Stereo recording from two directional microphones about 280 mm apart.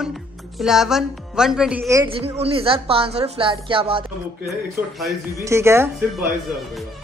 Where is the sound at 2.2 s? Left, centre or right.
Right.